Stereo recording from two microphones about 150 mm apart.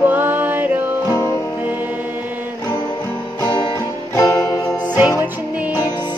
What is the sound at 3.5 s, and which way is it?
Music, 30° left (ahead or behind).